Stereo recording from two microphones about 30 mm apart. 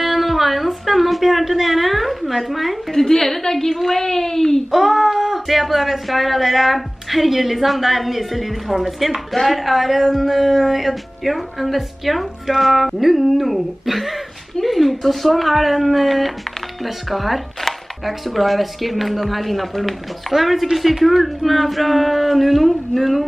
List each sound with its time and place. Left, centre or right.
0.0 s a woman's voice: centre
2.9 s a woman's voice: centre
4.6 s a woman's voice: centre
9.3 s a woman's voice: centre